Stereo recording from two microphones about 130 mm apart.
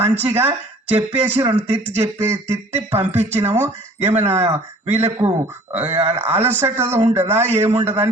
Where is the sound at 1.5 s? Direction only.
60° right (ahead or behind).